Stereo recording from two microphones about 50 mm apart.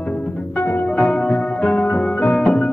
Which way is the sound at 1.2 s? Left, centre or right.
Centre.